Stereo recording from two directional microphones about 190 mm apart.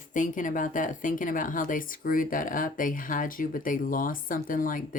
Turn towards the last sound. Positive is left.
turn(degrees=45)  # may be behind; listen again after turning